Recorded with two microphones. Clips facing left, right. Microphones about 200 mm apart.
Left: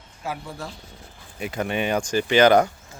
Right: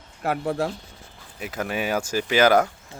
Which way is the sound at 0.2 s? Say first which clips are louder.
Right 8 dB; 65° right (ahead or behind).